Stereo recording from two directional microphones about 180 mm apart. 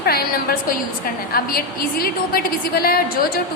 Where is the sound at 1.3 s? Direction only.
55° left (ahead or behind).